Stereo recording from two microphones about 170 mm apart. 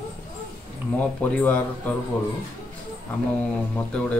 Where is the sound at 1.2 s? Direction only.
10° left (ahead or behind).